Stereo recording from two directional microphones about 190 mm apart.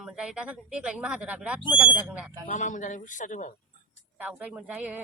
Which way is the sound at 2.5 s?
40° left (ahead or behind).